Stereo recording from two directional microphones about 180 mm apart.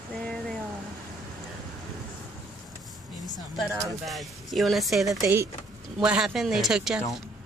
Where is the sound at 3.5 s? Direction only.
Centre (ahead or behind).